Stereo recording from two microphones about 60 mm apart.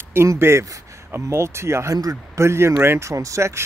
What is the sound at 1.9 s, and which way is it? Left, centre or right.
Speech, right.